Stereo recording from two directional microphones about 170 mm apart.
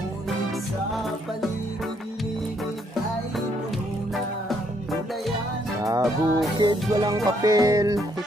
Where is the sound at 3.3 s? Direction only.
Centre (ahead or behind).